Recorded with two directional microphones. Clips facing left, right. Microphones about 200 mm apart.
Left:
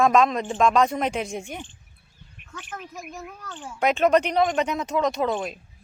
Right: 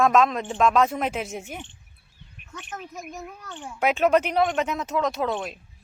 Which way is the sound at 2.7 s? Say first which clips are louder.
Right 1 dB; centre (ahead or behind).